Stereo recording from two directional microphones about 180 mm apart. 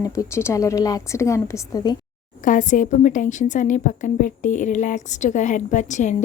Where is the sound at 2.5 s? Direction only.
45° left (ahead or behind).